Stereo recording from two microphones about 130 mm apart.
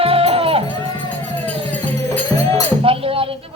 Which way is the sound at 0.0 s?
45° right (ahead or behind).